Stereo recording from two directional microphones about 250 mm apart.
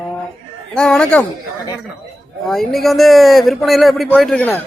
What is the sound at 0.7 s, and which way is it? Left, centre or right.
Speech, centre.